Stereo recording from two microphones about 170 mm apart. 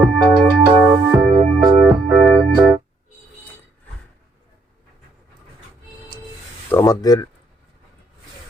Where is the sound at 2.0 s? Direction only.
25° right (ahead or behind).